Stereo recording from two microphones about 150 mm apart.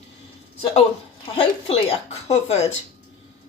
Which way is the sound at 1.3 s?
40° left (ahead or behind).